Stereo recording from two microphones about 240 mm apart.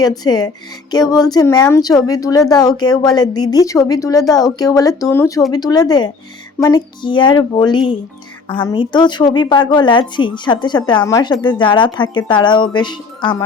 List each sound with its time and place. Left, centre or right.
0.0 s a woman's voice: centre